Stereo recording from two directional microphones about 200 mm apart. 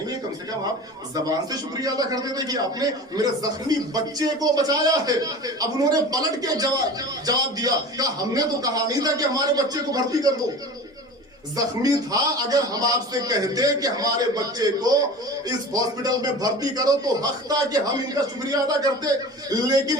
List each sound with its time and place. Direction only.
1.1 s a man's voice: 20° right (ahead or behind)
11.5 s a man's voice: 20° right (ahead or behind)